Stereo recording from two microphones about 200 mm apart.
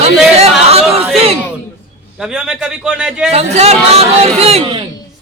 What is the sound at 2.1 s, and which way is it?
A man's voice, 5° right (ahead or behind).